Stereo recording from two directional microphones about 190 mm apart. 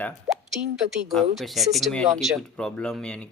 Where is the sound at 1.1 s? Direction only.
Centre (ahead or behind).